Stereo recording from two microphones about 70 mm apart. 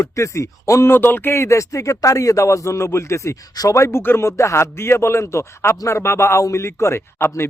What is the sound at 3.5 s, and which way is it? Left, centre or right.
Speech, left.